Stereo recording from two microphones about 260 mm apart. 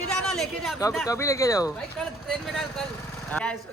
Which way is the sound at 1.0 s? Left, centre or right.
Centre.